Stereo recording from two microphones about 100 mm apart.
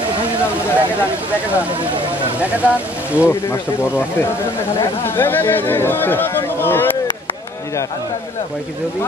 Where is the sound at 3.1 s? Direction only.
20° left (ahead or behind).